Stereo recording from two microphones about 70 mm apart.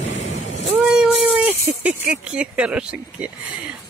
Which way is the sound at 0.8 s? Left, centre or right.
Centre.